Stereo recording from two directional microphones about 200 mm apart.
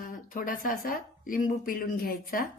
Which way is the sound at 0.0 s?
45° left (ahead or behind).